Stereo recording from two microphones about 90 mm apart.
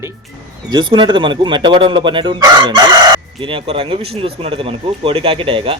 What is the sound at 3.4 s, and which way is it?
Speech, 90° right.